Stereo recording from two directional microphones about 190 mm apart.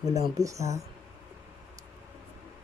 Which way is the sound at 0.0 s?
15° right (ahead or behind).